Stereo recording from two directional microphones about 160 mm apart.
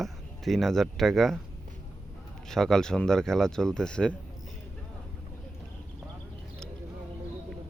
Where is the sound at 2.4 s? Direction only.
5° left (ahead or behind).